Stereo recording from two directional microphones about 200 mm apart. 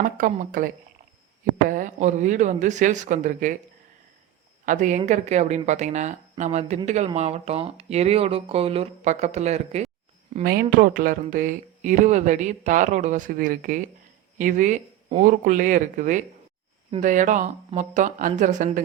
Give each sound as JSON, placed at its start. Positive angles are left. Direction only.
{"t": 0.0, "sound": "speech", "side_deg": -45}
{"t": 4.6, "sound": "speech", "side_deg": -40}
{"t": 10.4, "sound": "speech", "side_deg": -50}